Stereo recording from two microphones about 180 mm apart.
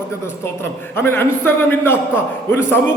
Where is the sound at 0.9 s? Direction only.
15° left (ahead or behind).